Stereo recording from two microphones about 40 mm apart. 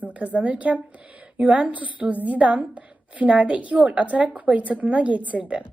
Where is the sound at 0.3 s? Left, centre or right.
Right.